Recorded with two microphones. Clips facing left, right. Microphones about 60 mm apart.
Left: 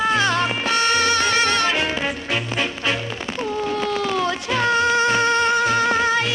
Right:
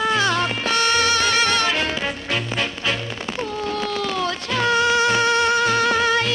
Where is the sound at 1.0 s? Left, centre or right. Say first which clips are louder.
Even; left; by 3.0 s centre.